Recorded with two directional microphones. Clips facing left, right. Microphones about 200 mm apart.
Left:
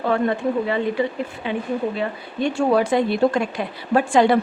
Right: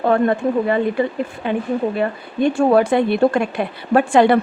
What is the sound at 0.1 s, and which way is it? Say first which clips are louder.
Speech: right 4 dB; 50° right (ahead or behind).